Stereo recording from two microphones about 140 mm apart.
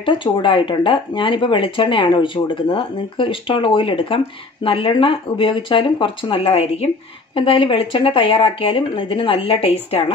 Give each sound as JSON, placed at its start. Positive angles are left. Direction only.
{"t": 0.0, "sound": "speech", "side_deg": 35}